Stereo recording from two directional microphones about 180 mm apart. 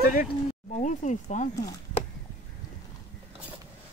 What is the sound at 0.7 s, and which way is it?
Speech, 45° left (ahead or behind).